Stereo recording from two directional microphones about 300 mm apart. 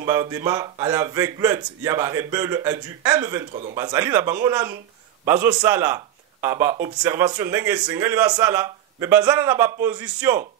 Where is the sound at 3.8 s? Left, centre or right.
Centre.